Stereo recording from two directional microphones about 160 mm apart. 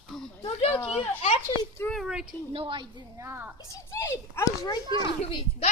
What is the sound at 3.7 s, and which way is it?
A child's voice, 20° left (ahead or behind).